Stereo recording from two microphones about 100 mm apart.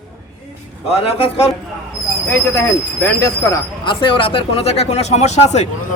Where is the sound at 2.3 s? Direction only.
25° left (ahead or behind).